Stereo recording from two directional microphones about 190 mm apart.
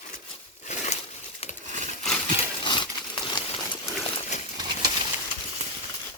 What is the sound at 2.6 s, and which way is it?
Horse, 25° left (ahead or behind).